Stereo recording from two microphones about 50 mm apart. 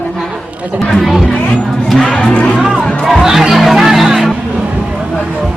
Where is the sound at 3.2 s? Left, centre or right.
Centre.